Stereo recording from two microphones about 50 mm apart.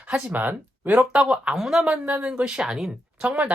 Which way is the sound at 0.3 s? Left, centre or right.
Right.